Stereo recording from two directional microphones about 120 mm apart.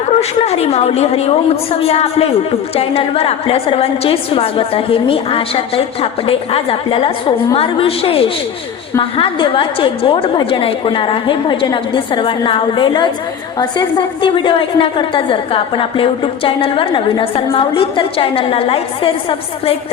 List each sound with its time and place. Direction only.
0.2 s a woman's voice: 60° left (ahead or behind)